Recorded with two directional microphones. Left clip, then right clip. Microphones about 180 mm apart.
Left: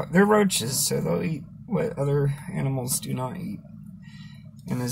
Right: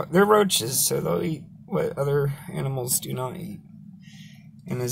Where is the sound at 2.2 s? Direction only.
15° right (ahead or behind).